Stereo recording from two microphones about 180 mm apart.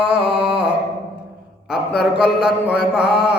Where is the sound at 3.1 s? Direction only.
65° left (ahead or behind).